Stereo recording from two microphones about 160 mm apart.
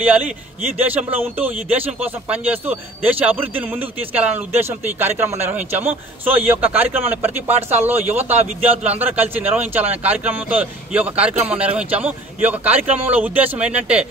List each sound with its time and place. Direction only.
0.7 s a man's voice: 10° right (ahead or behind)